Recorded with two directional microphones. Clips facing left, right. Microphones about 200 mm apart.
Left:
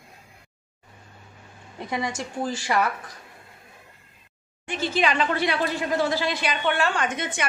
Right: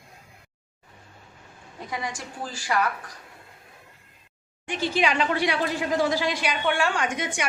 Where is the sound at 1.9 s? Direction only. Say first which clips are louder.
Left 4 dB; 25° left (ahead or behind).